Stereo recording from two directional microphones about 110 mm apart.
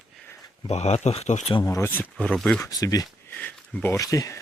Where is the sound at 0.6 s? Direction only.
80° left.